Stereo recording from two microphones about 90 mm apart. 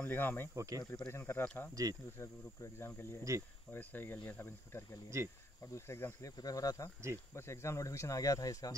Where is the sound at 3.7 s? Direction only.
25° left (ahead or behind).